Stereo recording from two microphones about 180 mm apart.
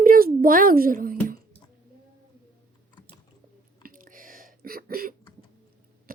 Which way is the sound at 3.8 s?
50° right (ahead or behind).